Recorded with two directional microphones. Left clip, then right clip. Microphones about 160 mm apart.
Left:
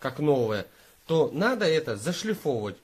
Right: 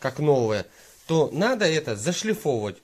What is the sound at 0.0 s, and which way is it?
Speech, 55° right (ahead or behind).